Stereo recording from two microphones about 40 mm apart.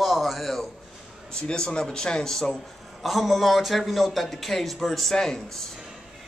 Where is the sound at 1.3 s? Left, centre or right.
Centre.